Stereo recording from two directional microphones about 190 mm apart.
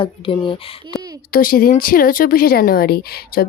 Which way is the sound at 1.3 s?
50° left (ahead or behind).